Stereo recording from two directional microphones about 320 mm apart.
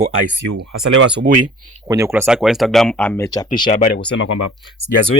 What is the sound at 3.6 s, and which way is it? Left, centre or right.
Speech, left.